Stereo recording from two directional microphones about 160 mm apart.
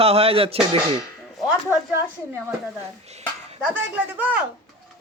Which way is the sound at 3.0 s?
40° right (ahead or behind).